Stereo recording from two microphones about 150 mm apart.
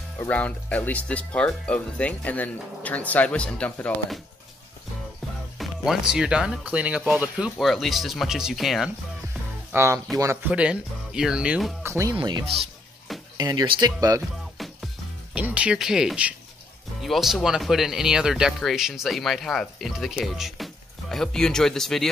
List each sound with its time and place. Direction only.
0.2 s speech: 10° left (ahead or behind)
5.6 s speech: 5° right (ahead or behind)
9.7 s speech: 20° right (ahead or behind)
10.5 s speech: 5° right (ahead or behind)
11.8 s speech: 20° right (ahead or behind)
12.2 s speech: 30° right (ahead or behind)
14.6 s music: centre (ahead or behind)
15.3 s speech: 10° right (ahead or behind)